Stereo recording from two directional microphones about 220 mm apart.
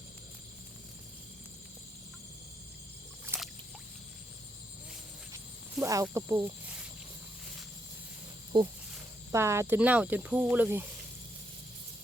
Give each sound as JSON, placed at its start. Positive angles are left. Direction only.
{"t": 3.2, "sound": "rowboat", "side_deg": -10}
{"t": 5.8, "sound": "speech", "side_deg": -15}
{"t": 8.5, "sound": "speech", "side_deg": -20}